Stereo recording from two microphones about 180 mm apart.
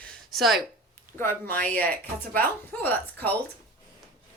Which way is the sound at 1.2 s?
10° left (ahead or behind).